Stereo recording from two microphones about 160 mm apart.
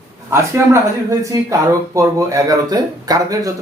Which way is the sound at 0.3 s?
15° right (ahead or behind).